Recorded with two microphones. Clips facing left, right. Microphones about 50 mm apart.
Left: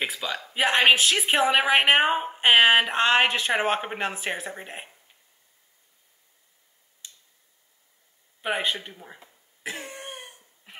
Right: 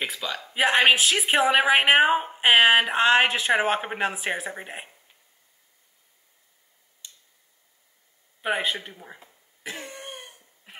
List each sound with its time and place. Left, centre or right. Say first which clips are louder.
0.0 s a woman's voice: left 1 dB; centre
8.4 s a woman's voice: right 1 dB; centre
9.6 s cough: left 1 dB; centre
9.8 s cough: even; left
10.1 s a sound: even; centre